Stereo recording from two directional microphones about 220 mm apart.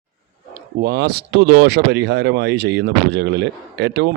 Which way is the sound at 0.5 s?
45° right (ahead or behind).